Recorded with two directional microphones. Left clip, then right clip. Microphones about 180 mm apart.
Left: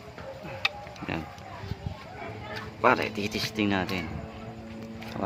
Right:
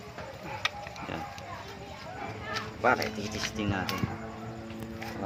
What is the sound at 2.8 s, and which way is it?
Speech, 50° left (ahead or behind).